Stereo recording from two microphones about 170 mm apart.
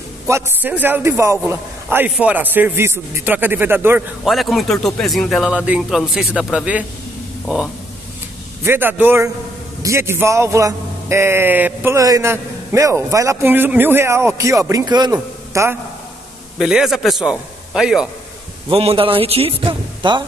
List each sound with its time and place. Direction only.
0.3 s a man's voice: 10° right (ahead or behind)
4.2 s a man's voice: centre (ahead or behind)
8.6 s a man's voice: 10° right (ahead or behind)
16.5 s speech: 5° right (ahead or behind)
18.7 s a man's voice: 35° right (ahead or behind)